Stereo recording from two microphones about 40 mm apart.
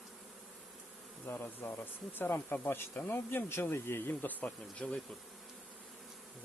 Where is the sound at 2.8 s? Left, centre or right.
Left.